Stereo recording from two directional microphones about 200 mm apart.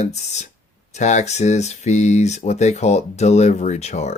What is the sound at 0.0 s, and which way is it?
Speech, 35° left (ahead or behind).